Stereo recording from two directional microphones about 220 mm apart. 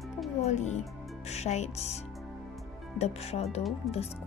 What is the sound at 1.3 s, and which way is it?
Music, 30° left (ahead or behind).